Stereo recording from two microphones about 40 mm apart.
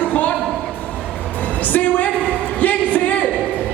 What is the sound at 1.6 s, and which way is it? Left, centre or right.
Speech, left.